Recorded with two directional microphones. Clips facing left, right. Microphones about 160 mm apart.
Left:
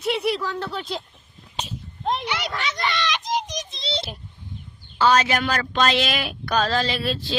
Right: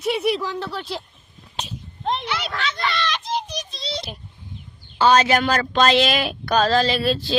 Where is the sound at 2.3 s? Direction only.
15° left (ahead or behind).